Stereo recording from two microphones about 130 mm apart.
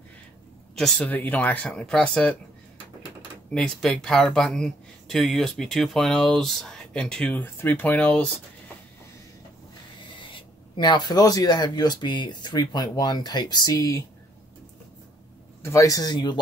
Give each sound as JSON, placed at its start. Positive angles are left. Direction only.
{"t": 0.7, "sound": "speech", "side_deg": 5}
{"t": 3.5, "sound": "speech", "side_deg": 5}
{"t": 10.2, "sound": "speech", "side_deg": 40}
{"t": 15.6, "sound": "a man's voice", "side_deg": 25}